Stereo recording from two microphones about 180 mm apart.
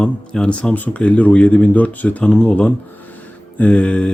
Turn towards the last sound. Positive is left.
turn(degrees=5)  # may be behind; listen again after turning